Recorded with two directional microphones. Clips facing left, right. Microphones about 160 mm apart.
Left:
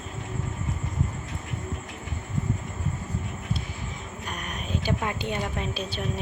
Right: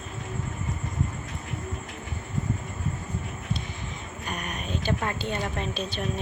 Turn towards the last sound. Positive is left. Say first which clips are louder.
# even
turn(degrees=5)  # may be behind; listen again after turning